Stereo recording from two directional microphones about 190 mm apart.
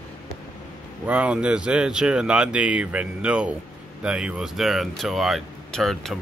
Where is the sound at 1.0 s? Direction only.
5° right (ahead or behind).